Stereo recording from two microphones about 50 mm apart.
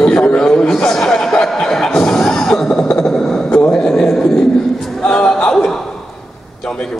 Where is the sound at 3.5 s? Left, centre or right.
Left.